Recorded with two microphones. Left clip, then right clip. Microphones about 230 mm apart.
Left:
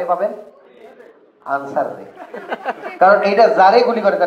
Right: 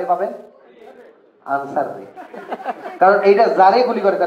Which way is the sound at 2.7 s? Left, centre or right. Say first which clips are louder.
Left 2 dB; left.